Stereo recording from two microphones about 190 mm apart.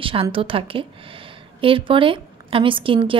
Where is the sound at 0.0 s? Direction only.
30° right (ahead or behind).